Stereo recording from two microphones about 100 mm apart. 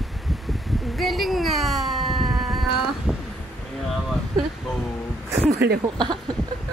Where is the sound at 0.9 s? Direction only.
Centre (ahead or behind).